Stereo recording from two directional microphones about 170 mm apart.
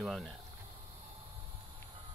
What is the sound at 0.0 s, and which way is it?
Speech, centre (ahead or behind).